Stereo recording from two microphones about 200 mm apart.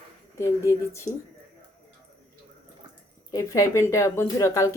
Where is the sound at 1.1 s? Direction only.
20° left (ahead or behind).